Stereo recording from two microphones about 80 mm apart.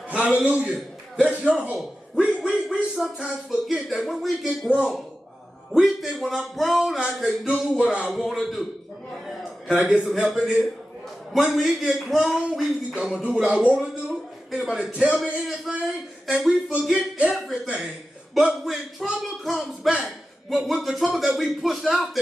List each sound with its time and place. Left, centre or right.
0.1 s a man's voice: centre
0.7 s cough: centre
1.5 s a man's voice: centre
4.6 s a man's voice: centre
5.7 s a man's voice: centre
8.1 s speech: centre
9.8 s a man's voice: centre
12.9 s a man's voice: centre
14.0 s a man's voice: centre
18.3 s speech: centre